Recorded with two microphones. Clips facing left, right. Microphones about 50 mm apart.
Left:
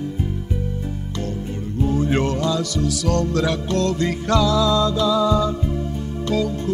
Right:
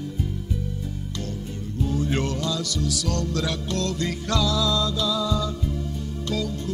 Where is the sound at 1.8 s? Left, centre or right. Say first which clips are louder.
Left 5 dB; left.